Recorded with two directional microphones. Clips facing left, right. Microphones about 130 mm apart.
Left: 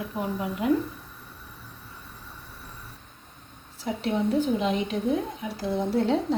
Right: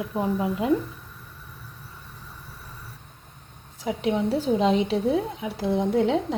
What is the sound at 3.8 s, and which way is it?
Speech, 5° right (ahead or behind).